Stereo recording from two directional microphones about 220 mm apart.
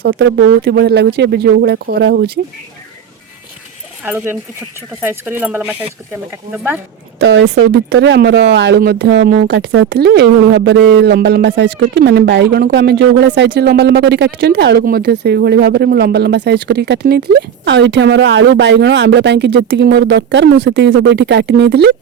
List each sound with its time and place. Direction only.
0.0 s speech: 50° right (ahead or behind)
4.0 s speech: 5° right (ahead or behind)
7.2 s speech: 50° right (ahead or behind)